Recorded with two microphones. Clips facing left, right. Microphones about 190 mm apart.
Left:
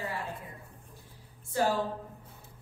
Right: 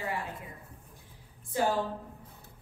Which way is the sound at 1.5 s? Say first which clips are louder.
Left 1 dB; 15° right (ahead or behind).